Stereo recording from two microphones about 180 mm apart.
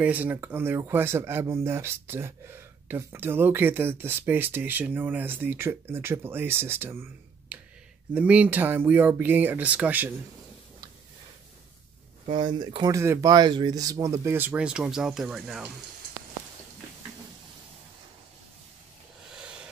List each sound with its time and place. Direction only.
0.0 s speech: 10° right (ahead or behind)
12.3 s speech: 25° right (ahead or behind); by 15.7 s centre (ahead or behind)